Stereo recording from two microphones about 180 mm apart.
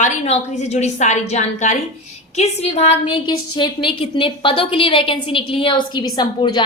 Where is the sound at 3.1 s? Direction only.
25° left (ahead or behind).